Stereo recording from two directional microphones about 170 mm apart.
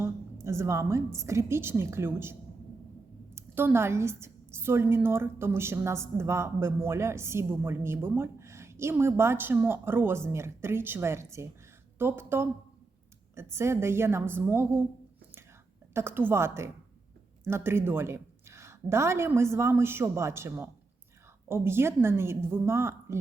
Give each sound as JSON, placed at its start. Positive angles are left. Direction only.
{"t": 0.4, "sound": "a woman's voice", "side_deg": -15}
{"t": 3.3, "sound": "a woman's voice", "side_deg": -15}
{"t": 15.9, "sound": "a woman's voice", "side_deg": -15}